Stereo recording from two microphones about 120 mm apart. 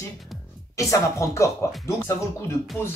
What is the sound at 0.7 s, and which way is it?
Speech, 25° left (ahead or behind).